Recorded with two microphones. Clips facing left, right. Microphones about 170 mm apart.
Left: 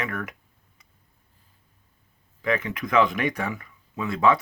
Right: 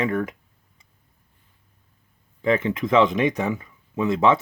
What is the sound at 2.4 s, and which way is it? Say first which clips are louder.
Speech: right 5 dB; 25° right (ahead or behind).